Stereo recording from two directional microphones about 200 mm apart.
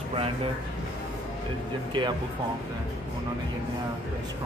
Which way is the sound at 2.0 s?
20° right (ahead or behind).